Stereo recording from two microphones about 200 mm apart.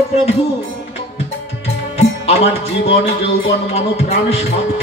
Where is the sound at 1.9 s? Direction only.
30° left (ahead or behind).